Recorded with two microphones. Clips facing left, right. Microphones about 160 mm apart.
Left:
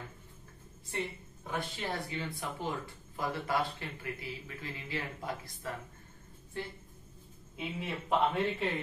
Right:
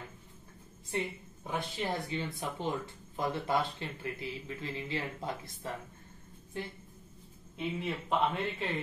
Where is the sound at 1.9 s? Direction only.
20° right (ahead or behind).